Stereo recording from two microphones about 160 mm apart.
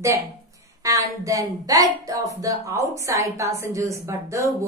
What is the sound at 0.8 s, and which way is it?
A woman's voice, 20° right (ahead or behind).